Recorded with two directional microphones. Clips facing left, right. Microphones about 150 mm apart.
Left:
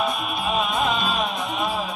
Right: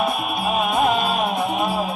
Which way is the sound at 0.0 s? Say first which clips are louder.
Right 3 dB; 55° right (ahead or behind).